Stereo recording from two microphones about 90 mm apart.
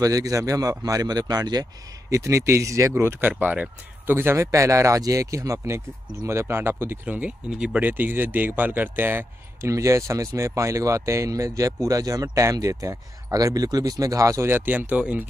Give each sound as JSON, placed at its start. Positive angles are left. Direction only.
{"t": 0.0, "sound": "speech", "side_deg": -40}
{"t": 9.7, "sound": "speech", "side_deg": -35}